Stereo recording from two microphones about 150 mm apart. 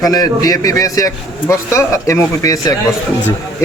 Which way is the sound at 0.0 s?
25° left (ahead or behind).